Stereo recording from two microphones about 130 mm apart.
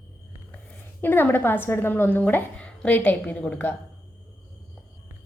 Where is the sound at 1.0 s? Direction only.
15° left (ahead or behind).